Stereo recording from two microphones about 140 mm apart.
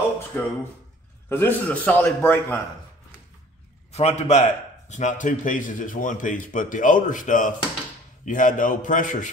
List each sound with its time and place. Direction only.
0.3 s a man's voice: 15° left (ahead or behind)
3.9 s a man's voice: 50° left (ahead or behind); by 9.3 s 65° left (ahead or behind)